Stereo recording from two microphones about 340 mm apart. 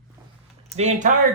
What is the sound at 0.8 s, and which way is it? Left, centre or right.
Speech, right.